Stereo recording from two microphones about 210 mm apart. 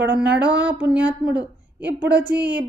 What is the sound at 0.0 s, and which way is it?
A woman's voice, 5° right (ahead or behind).